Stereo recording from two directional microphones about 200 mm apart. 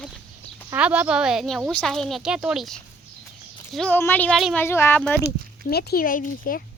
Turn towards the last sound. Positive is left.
turn(degrees=45)  # may be behind; listen again after turning